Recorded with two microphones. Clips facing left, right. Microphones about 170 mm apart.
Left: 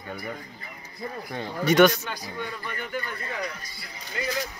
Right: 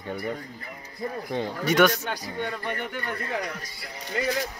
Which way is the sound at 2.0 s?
65° right (ahead or behind).